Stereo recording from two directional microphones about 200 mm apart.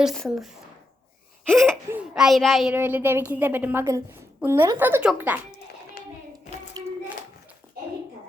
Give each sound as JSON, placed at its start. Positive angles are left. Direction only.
{"t": 0.0, "sound": "speech", "side_deg": 0}
{"t": 1.5, "sound": "a sound", "side_deg": 0}
{"t": 1.9, "sound": "a child's voice", "side_deg": -5}
{"t": 6.0, "sound": "hands", "side_deg": 45}
{"t": 6.8, "sound": "child singing", "side_deg": -20}